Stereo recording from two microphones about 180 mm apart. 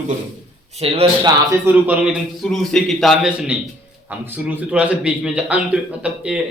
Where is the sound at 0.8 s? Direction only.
35° right (ahead or behind).